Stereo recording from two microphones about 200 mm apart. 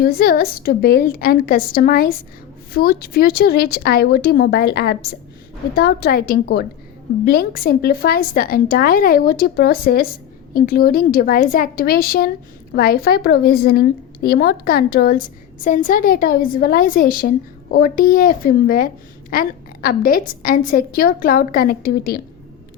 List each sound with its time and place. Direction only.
0.0 s a woman's voice: 50° left (ahead or behind)